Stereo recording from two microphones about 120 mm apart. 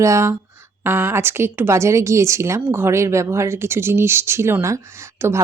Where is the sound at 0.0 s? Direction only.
25° right (ahead or behind).